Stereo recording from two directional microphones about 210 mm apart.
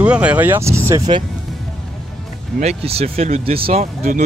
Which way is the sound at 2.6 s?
30° right (ahead or behind).